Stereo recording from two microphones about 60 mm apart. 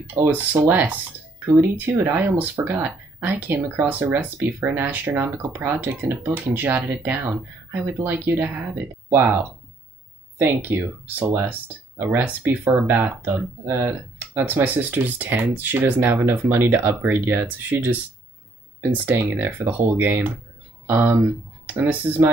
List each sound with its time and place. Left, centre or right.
0.0 s speech: right
0.7 s speech: right
19.1 s speech: right